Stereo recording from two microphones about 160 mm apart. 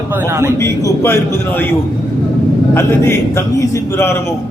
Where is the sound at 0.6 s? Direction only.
20° left (ahead or behind).